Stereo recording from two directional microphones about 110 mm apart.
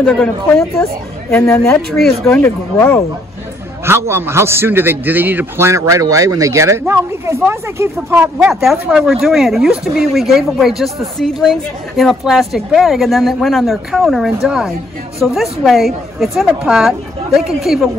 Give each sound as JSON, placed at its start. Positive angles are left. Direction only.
{"t": 0.0, "sound": "a woman's voice", "side_deg": 5}
{"t": 1.3, "sound": "speech", "side_deg": 20}
{"t": 2.0, "sound": "speech", "side_deg": 5}
{"t": 2.4, "sound": "speech", "side_deg": 20}
{"t": 3.8, "sound": "a man's voice", "side_deg": -20}
{"t": 8.2, "sound": "a woman's voice", "side_deg": -10}